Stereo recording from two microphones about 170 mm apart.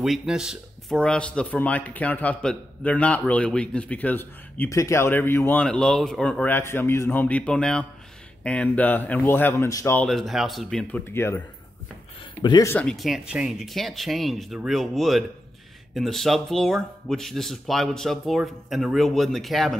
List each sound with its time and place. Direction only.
0.0 s speech: centre (ahead or behind); by 9.9 s 20° left (ahead or behind)
9.9 s speech: centre (ahead or behind)
12.4 s speech: 25° left (ahead or behind)
12.6 s speech: 10° left (ahead or behind)
12.9 s speech: centre (ahead or behind)